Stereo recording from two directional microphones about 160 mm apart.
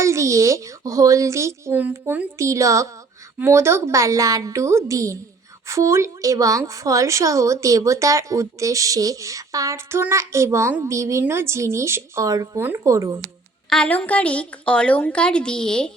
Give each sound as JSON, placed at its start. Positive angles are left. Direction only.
{"t": 0.0, "sound": "a woman's voice", "side_deg": -20}
{"t": 13.7, "sound": "a woman's voice", "side_deg": 5}